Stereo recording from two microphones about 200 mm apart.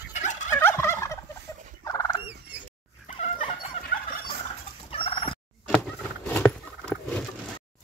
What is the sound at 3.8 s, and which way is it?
Fowl, 30° left (ahead or behind).